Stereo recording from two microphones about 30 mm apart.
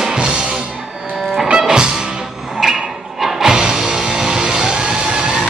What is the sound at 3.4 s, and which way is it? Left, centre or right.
Music, right.